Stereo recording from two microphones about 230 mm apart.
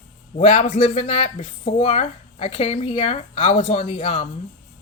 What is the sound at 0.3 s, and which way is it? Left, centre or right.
Speech, left.